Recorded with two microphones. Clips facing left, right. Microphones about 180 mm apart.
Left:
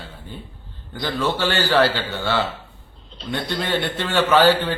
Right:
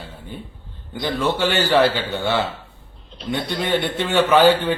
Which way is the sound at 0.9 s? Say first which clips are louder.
Right 2 dB; 20° right (ahead or behind).